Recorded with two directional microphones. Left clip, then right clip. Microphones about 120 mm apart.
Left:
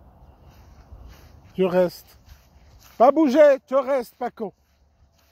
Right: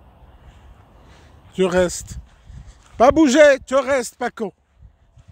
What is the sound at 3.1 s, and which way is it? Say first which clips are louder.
Speech: right 4 dB; 50° right (ahead or behind).